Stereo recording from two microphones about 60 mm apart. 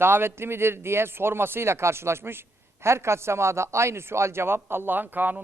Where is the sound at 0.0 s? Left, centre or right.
Right.